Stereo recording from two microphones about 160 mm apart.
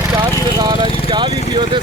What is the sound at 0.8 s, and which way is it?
Vehicle, 35° left (ahead or behind).